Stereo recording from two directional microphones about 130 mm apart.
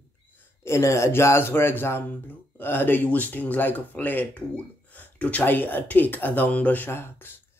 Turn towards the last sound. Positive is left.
turn(degrees=15)  # may be behind; listen again after turning